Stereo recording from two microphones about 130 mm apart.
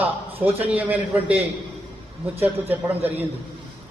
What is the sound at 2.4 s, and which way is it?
Speech, 15° right (ahead or behind).